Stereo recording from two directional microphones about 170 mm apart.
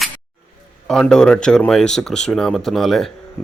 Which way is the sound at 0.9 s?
5° left (ahead or behind).